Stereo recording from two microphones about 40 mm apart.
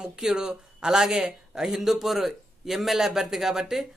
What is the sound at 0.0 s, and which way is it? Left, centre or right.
A man's voice, centre.